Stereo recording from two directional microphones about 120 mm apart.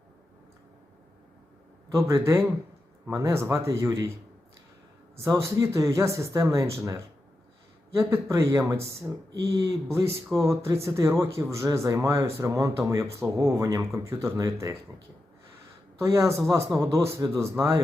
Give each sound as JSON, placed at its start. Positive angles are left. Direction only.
{"t": 1.9, "sound": "speech", "side_deg": -25}
{"t": 5.1, "sound": "speech", "side_deg": -25}
{"t": 8.1, "sound": "speech", "side_deg": -25}
{"t": 16.0, "sound": "speech", "side_deg": -25}